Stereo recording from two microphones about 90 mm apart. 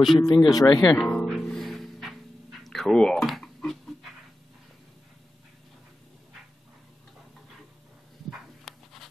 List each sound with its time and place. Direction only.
0.0 s speech: centre (ahead or behind)
0.5 s speech: 45° left (ahead or behind)
0.9 s music: 5° left (ahead or behind)
2.6 s dog: 5° left (ahead or behind)
8.3 s a sound: centre (ahead or behind)